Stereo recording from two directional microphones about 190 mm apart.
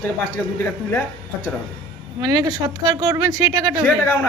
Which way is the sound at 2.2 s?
20° right (ahead or behind).